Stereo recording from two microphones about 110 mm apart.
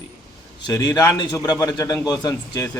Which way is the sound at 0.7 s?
35° left (ahead or behind).